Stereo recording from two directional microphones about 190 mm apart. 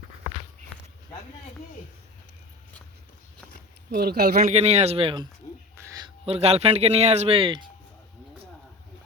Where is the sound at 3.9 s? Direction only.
55° right (ahead or behind).